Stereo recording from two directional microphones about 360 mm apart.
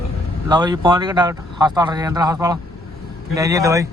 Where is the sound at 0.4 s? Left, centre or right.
Centre.